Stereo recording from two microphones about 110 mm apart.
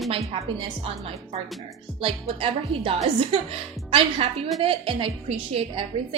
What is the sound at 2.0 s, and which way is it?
A woman's voice, 55° right (ahead or behind).